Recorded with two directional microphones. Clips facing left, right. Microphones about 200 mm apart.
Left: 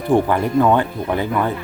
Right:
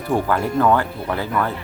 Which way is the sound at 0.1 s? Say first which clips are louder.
Left 4 dB; 15° left (ahead or behind).